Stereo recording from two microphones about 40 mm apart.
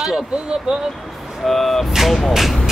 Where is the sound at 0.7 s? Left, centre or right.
Right.